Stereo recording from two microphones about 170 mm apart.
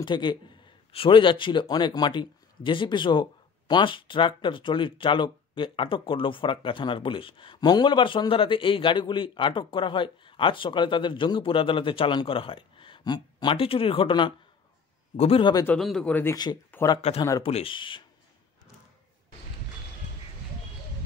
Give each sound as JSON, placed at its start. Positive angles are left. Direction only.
{"t": 0.0, "sound": "speech", "side_deg": 25}
{"t": 15.6, "sound": "speech", "side_deg": 5}
{"t": 16.9, "sound": "speech", "side_deg": 30}